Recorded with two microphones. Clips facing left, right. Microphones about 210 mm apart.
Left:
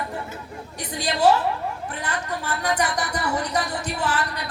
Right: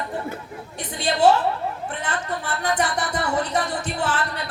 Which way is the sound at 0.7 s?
40° left (ahead or behind).